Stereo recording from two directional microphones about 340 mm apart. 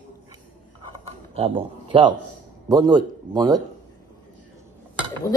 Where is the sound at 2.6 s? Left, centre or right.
Centre.